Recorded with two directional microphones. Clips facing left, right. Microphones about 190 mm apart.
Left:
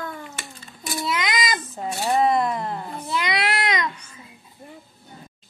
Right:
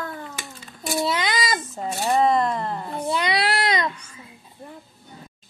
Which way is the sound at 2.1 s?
5° left (ahead or behind).